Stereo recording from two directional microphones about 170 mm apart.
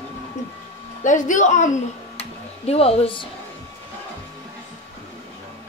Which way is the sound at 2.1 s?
35° left (ahead or behind).